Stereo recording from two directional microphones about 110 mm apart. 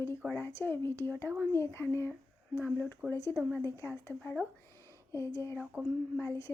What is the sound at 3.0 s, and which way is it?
Speech, 10° right (ahead or behind).